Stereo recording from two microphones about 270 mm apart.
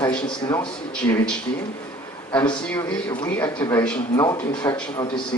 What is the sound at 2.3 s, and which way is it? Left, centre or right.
Speech, centre.